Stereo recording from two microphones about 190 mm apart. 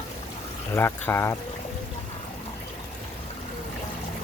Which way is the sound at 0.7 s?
10° left (ahead or behind).